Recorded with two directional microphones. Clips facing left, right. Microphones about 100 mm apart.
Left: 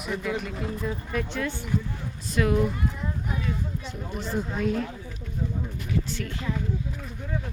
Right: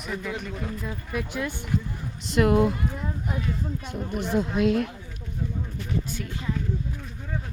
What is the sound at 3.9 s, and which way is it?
Speech, 60° right (ahead or behind).